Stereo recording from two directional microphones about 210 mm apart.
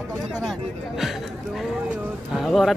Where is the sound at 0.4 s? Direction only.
Centre (ahead or behind).